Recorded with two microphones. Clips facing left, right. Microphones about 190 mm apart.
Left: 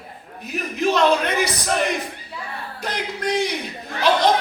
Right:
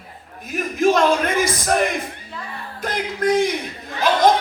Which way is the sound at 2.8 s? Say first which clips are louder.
Right 5 dB; 50° right (ahead or behind).